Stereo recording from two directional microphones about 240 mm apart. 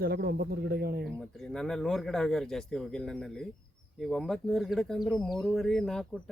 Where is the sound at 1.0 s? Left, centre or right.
Centre.